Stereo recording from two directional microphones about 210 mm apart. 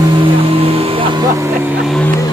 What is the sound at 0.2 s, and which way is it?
Vehicle, 25° right (ahead or behind).